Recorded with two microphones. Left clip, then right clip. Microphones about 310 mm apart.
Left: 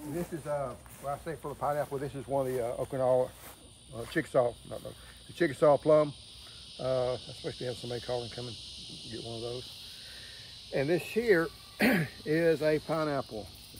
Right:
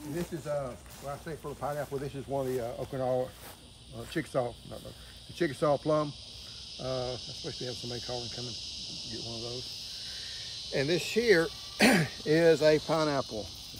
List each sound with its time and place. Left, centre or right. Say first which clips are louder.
0.5 s speech: left 1 dB; centre
3.9 s cricket: left 4 dB; centre
10.7 s speech: even; centre